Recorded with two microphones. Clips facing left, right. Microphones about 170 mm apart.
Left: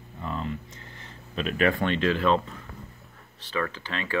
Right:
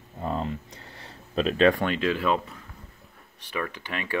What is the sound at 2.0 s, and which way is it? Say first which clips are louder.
Speech: left 3 dB; 10° right (ahead or behind).